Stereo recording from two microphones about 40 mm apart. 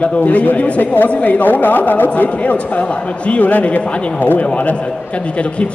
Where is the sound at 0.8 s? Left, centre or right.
Left.